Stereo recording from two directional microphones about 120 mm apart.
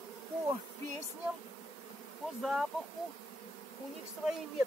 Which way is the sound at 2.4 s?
Centre (ahead or behind).